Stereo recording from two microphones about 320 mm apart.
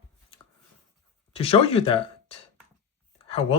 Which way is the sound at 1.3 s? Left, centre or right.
Centre.